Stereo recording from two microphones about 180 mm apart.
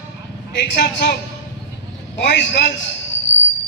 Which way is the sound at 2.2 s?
75° left (ahead or behind).